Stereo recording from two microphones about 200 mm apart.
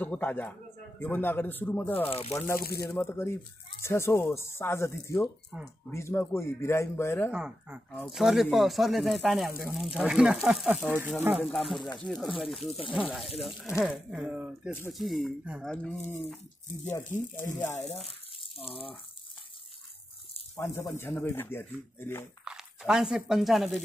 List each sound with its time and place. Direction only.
0.0 s a man's voice: 10° left (ahead or behind)
2.0 s speech: 30° left (ahead or behind)
2.3 s a man's voice: 15° left (ahead or behind)
2.6 s speech: 50° left (ahead or behind)
2.9 s a man's voice: 10° left (ahead or behind)
7.2 s speech: 5° right (ahead or behind)
17.6 s a man's voice: 15° left (ahead or behind)
18.4 s speech: 30° left (ahead or behind)
20.5 s a man's voice: 15° left (ahead or behind)
22.4 s speech: 5° right (ahead or behind)